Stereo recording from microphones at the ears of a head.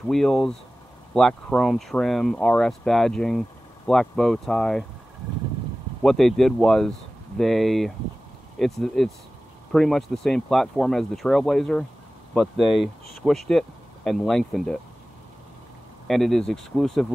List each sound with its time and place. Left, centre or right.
0.1 s speech: centre
1.7 s speech: centre
5.2 s vehicle: right
6.0 s speech: centre
16.1 s speech: centre